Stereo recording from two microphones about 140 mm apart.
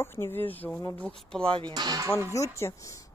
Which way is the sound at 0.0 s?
15° left (ahead or behind).